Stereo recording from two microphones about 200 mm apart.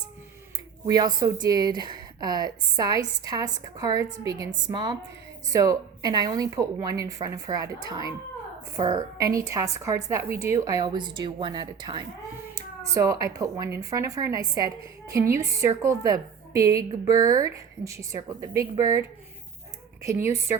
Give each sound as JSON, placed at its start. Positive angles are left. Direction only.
{"t": 0.9, "sound": "a woman's voice", "side_deg": -20}
{"t": 20.1, "sound": "a woman's voice", "side_deg": -15}